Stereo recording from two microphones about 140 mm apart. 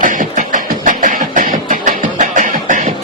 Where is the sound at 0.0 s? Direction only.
70° right (ahead or behind).